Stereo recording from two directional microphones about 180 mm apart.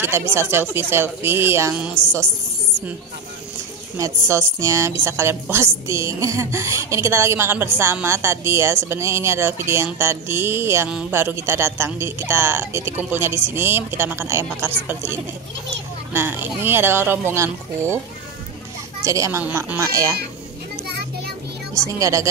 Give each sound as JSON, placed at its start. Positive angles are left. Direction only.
{"t": 0.3, "sound": "a woman's voice", "side_deg": -15}
{"t": 4.0, "sound": "a woman's voice", "side_deg": -15}
{"t": 16.1, "sound": "a woman's voice", "side_deg": -10}
{"t": 19.0, "sound": "a woman's voice", "side_deg": -15}
{"t": 21.9, "sound": "a woman's voice", "side_deg": -20}